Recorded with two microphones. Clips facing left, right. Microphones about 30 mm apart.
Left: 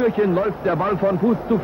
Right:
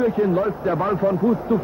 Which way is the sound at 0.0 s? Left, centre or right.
Left.